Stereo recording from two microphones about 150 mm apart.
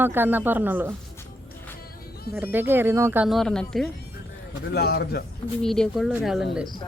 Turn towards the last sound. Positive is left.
turn(degrees=0)  # may be behind; listen again after turning